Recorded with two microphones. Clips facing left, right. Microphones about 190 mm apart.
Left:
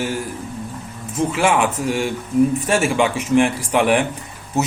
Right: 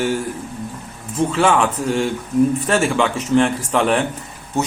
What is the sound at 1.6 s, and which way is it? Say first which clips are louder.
A man's voice: right 1 dB; 10° left (ahead or behind).